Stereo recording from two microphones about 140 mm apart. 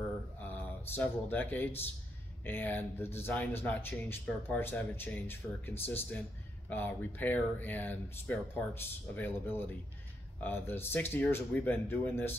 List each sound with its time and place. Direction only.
0.4 s speech: 15° left (ahead or behind)